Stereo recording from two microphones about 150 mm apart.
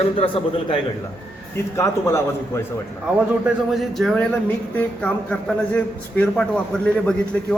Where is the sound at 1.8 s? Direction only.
20° left (ahead or behind).